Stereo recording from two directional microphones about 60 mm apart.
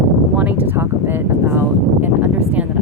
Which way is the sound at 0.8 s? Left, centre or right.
Right.